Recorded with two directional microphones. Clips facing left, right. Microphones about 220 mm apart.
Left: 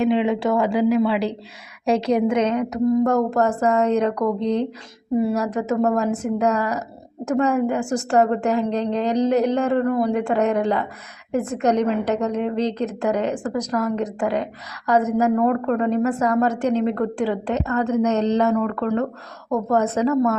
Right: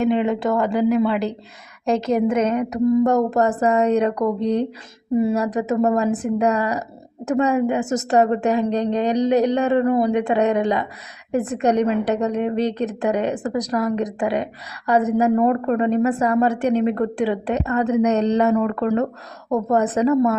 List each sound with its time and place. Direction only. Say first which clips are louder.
0.0 s a woman's voice: even; centre (ahead or behind)